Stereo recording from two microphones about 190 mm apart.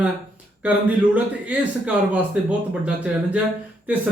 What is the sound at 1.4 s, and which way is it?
A man's voice, 5° right (ahead or behind).